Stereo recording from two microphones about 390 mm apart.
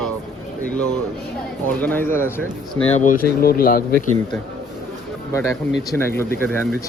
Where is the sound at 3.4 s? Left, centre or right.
Left.